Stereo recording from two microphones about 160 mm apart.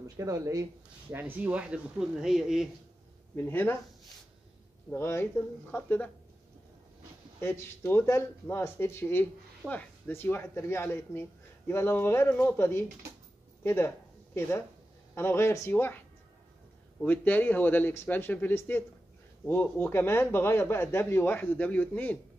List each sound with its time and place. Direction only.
0.2 s speech: 20° right (ahead or behind); by 2.7 s 5° right (ahead or behind)
3.3 s speech: 10° left (ahead or behind)
4.9 s speech: 15° left (ahead or behind)
7.3 s speech: 15° left (ahead or behind)
17.0 s speech: 10° left (ahead or behind)